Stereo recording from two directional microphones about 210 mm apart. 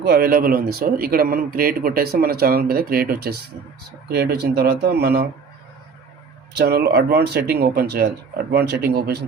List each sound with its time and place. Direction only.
0.0 s speech: 50° right (ahead or behind)
6.6 s speech: 50° right (ahead or behind)